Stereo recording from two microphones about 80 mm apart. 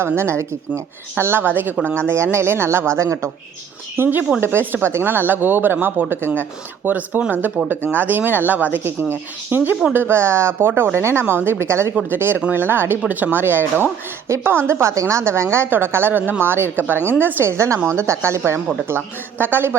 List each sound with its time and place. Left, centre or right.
0.2 s a woman's voice: right
2.0 s a woman's voice: right